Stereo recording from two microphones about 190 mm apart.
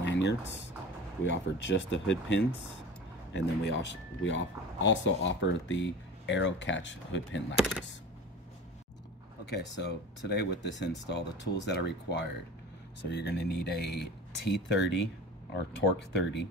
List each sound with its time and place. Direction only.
0.0 s a sound: 65° left (ahead or behind)
1.2 s speech: 70° left (ahead or behind)
3.3 s speech: 70° left (ahead or behind)
7.5 s speech: 5° right (ahead or behind)
9.5 s speech: 60° left (ahead or behind)
16.1 s speech: 65° left (ahead or behind)